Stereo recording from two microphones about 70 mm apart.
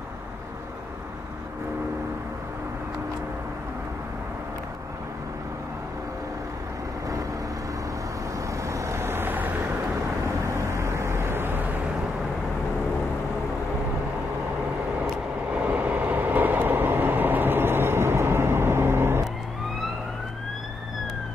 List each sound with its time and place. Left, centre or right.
8.5 s vehicle: right
10.2 s vehicle: right
15.0 s vehicle: centre; by 19.2 s right